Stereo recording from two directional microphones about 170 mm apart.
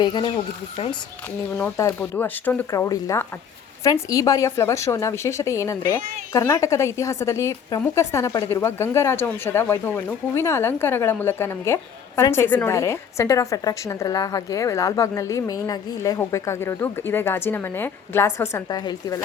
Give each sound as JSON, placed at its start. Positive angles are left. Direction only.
{"t": 0.0, "sound": "speech", "side_deg": 25}
{"t": 1.5, "sound": "a woman's voice", "side_deg": 15}